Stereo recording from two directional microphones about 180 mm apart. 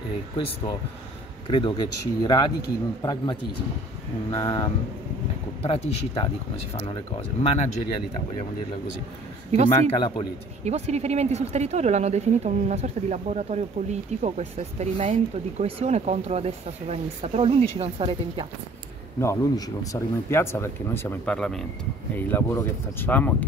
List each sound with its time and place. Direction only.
1.5 s a man's voice: 25° left (ahead or behind)
9.7 s a man's voice: 25° left (ahead or behind)
10.6 s speech: 35° right (ahead or behind)
19.1 s speech: 15° left (ahead or behind)
22.1 s speech: 15° left (ahead or behind)